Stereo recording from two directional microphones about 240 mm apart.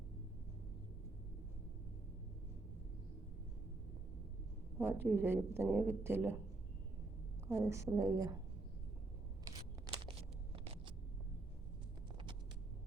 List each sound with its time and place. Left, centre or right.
4.8 s a woman's voice: centre
7.4 s a woman's voice: centre
10.1 s a sound: right